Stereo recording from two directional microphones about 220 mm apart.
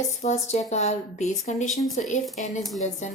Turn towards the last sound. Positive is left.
turn(degrees=30)  # may be behind; listen again after turning